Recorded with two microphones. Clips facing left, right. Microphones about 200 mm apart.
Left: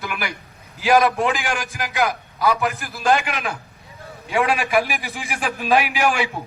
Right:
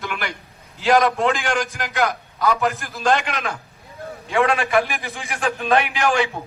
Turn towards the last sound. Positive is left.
turn(degrees=5)  # may be behind; listen again after turning